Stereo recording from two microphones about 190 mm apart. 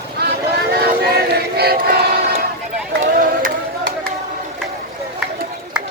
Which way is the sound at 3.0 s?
45° right (ahead or behind).